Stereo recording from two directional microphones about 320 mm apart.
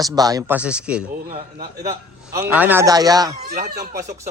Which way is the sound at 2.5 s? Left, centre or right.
Centre.